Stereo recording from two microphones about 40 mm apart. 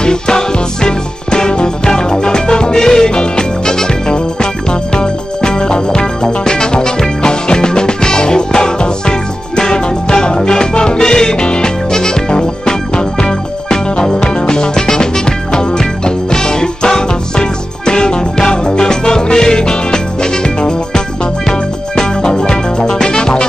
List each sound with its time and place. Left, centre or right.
0.0 s music: centre